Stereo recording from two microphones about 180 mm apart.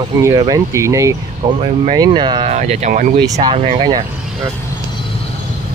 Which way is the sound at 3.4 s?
35° right (ahead or behind).